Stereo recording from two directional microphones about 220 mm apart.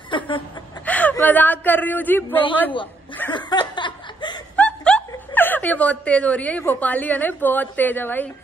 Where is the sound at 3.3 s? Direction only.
20° left (ahead or behind).